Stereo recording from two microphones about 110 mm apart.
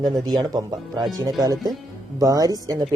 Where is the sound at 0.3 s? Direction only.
40° right (ahead or behind).